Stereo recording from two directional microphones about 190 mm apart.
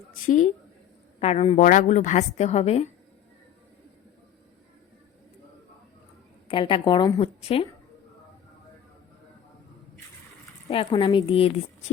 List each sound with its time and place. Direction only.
0.3 s a woman's voice: 40° left (ahead or behind)
6.5 s a woman's voice: 25° left (ahead or behind)
10.7 s a woman's voice: 30° left (ahead or behind)